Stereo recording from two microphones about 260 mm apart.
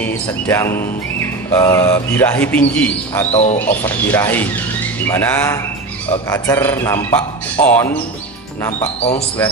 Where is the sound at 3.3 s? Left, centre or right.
Left.